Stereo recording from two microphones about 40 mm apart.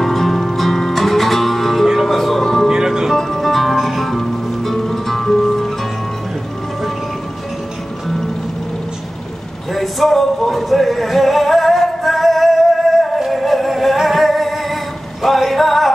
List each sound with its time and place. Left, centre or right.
0.0 s music: centre
2.7 s music: centre
3.2 s music: centre
9.8 s a sound: centre
13.3 s music: centre